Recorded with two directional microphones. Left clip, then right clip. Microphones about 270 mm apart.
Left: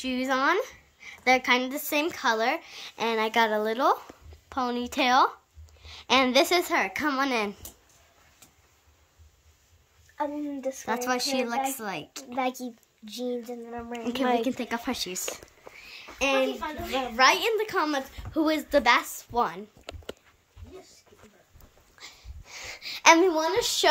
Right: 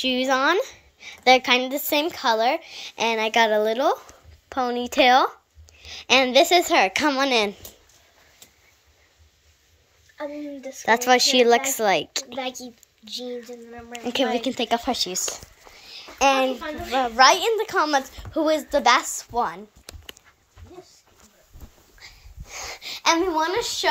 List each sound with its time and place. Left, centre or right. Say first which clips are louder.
0.0 s a woman's voice: right 5 dB; centre
10.9 s a woman's voice: right 11 dB; centre
12.3 s a woman's voice: left 1 dB; left
14.4 s a woman's voice: right 6 dB; centre
15.1 s a sound: right 6 dB; centre
16.9 s a woman's voice: right 6 dB; centre
22.0 s dog: right 1 dB; centre
22.6 s a sound: right 4 dB; centre
23.3 s a woman's voice: right 3 dB; centre